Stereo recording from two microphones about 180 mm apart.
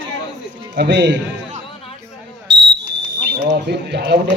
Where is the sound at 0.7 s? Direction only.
70° right (ahead or behind).